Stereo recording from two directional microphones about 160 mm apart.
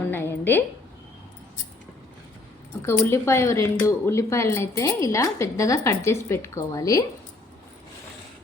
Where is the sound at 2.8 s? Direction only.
15° left (ahead or behind).